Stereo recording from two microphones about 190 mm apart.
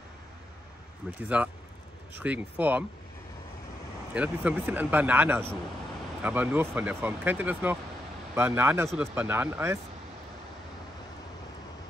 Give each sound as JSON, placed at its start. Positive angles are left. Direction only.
{"t": 1.0, "sound": "speech", "side_deg": -5}
{"t": 4.1, "sound": "speech", "side_deg": -5}